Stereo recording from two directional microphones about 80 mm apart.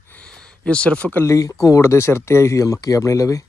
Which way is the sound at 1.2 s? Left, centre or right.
Left.